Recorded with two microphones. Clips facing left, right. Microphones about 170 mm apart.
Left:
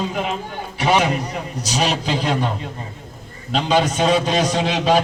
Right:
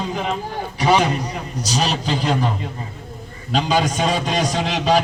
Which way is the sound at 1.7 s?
Centre (ahead or behind).